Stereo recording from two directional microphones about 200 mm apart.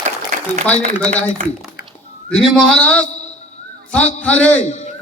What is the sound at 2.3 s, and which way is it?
A man's voice, 5° left (ahead or behind).